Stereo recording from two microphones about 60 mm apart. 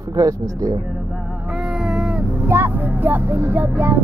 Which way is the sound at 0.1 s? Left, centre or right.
Right.